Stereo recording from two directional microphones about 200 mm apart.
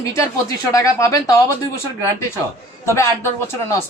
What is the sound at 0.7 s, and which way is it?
Speech, 15° left (ahead or behind).